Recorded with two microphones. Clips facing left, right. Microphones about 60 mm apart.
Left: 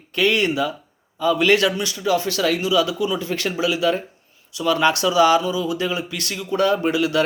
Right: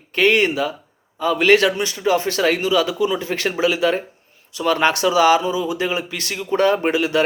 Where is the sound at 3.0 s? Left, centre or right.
Right.